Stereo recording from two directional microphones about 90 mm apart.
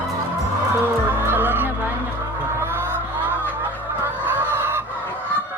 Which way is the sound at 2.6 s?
25° right (ahead or behind).